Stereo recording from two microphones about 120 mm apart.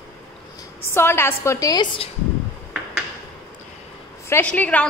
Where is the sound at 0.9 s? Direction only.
20° left (ahead or behind).